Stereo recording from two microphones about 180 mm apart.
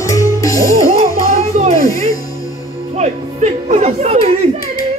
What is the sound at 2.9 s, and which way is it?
Speech, 40° right (ahead or behind).